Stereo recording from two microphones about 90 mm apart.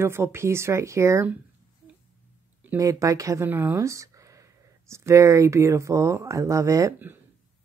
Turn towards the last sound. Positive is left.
turn(degrees=-35)  # may be behind; listen again after turning